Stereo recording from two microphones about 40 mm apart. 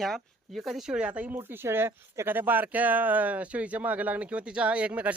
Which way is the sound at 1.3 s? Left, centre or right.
Right.